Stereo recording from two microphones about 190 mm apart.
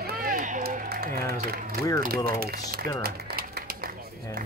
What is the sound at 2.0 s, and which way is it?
Speech, 50° right (ahead or behind).